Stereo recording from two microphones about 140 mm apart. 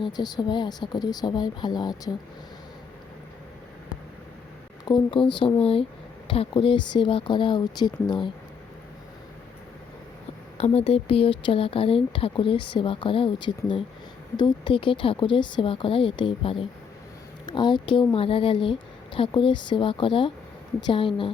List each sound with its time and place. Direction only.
0.0 s speech: 30° left (ahead or behind)
4.9 s speech: 35° left (ahead or behind)
10.6 s speech: 45° left (ahead or behind)